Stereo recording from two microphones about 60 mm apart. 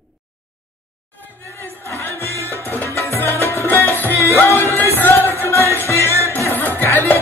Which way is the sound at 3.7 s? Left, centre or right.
Left.